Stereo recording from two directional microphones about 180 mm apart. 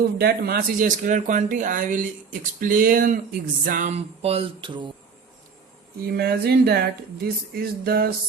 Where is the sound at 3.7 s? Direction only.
45° right (ahead or behind); by 4.9 s 25° right (ahead or behind).